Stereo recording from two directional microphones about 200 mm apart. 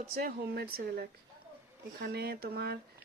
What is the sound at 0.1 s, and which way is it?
Speech, 50° right (ahead or behind).